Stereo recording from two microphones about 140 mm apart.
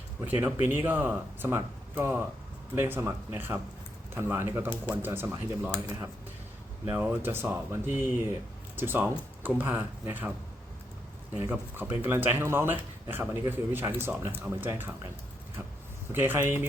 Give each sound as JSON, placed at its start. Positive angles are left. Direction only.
{"t": 0.3, "sound": "speech", "side_deg": -15}
{"t": 6.8, "sound": "speech", "side_deg": -15}
{"t": 11.3, "sound": "speech", "side_deg": -15}
{"t": 16.1, "sound": "speech", "side_deg": -15}